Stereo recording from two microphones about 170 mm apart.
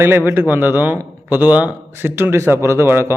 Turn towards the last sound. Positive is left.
turn(degrees=-15)  # may be behind; listen again after turning